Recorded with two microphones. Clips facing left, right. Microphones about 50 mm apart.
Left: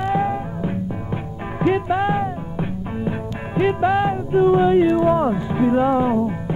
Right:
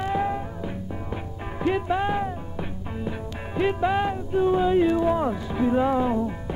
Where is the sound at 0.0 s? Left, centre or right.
Centre.